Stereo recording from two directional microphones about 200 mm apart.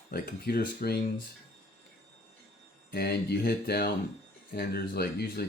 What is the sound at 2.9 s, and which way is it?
Speech, 50° left (ahead or behind).